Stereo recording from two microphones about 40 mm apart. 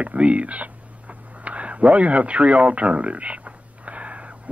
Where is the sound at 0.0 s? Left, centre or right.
Right.